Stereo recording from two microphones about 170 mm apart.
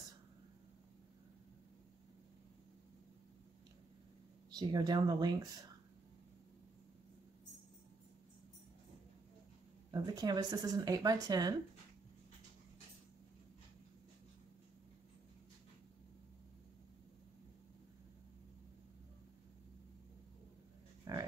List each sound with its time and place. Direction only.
4.6 s speech: 25° right (ahead or behind)
9.8 s speech: 25° right (ahead or behind)
21.1 s livestock: 20° right (ahead or behind)